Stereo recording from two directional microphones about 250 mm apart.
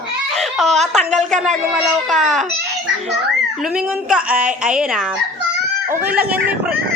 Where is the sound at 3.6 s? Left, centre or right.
Centre.